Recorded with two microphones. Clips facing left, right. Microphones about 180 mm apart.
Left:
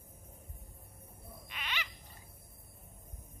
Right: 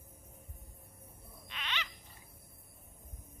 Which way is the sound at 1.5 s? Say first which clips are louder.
Right 1 dB; 10° left (ahead or behind).